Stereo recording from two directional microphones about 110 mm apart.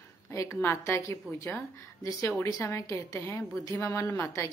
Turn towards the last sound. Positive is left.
turn(degrees=20)  # may be behind; listen again after turning